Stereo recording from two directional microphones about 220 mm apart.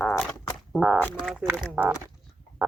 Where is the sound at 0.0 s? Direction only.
5° left (ahead or behind).